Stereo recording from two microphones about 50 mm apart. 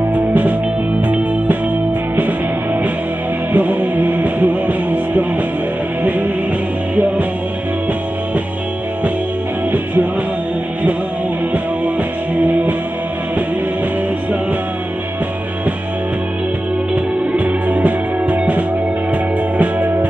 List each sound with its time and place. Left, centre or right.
0.1 s music: right
2.1 s music: right
12.4 s music: right
16.9 s music: right
19.6 s music: right